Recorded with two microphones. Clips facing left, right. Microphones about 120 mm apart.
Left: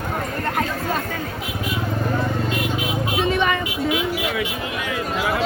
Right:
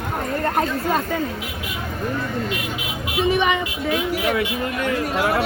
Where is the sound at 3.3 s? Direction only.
15° right (ahead or behind).